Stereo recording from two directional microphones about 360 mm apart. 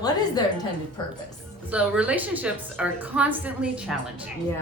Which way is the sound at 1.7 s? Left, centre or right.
Centre.